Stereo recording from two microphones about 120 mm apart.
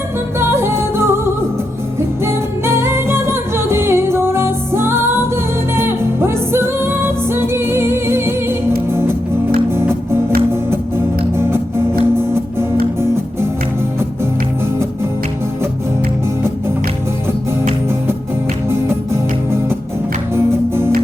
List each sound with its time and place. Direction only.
0.3 s music: 20° right (ahead or behind)
9.7 s music: 20° right (ahead or behind)
18.7 s music: 20° right (ahead or behind)
20.3 s music: 20° right (ahead or behind)